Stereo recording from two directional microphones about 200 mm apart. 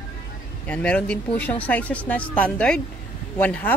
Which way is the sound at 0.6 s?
5° left (ahead or behind).